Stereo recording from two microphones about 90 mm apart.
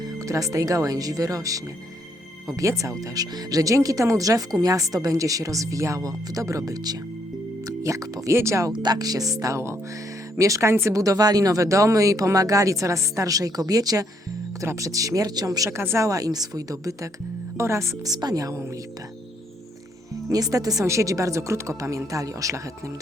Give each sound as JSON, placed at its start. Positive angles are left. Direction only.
{"t": 0.0, "sound": "speech", "side_deg": -40}
{"t": 8.7, "sound": "speech", "side_deg": -50}
{"t": 15.8, "sound": "speech", "side_deg": -25}
{"t": 16.0, "sound": "speech", "side_deg": -40}
{"t": 20.3, "sound": "speech", "side_deg": -40}